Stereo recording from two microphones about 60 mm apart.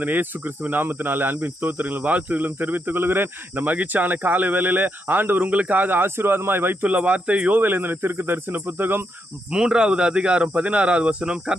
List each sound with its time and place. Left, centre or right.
0.0 s speech: right
6.8 s speech: right
9.5 s speech: centre